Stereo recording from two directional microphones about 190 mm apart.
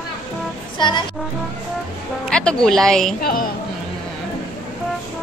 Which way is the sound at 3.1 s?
50° left (ahead or behind).